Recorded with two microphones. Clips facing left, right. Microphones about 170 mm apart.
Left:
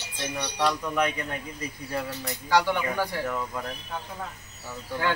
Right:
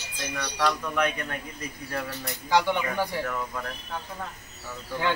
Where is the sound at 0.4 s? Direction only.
20° left (ahead or behind).